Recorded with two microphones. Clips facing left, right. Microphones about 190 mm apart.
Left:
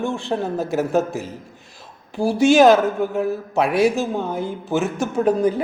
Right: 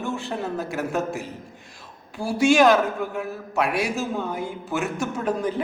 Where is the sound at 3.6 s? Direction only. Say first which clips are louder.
Left 7 dB; centre (ahead or behind).